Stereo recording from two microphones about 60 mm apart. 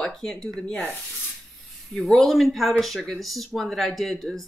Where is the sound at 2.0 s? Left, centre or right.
Centre.